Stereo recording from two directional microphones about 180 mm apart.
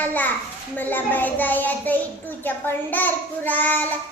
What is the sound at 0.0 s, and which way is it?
Child singing, 10° left (ahead or behind).